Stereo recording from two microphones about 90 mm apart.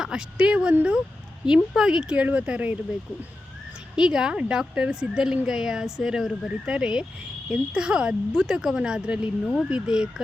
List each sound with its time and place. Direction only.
0.0 s speech: 5° right (ahead or behind)
3.9 s speech: 5° right (ahead or behind)